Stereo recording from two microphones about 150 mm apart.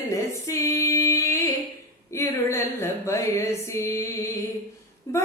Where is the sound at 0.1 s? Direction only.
20° left (ahead or behind).